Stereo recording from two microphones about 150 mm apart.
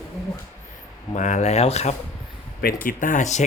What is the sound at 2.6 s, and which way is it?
Speech, 65° left (ahead or behind).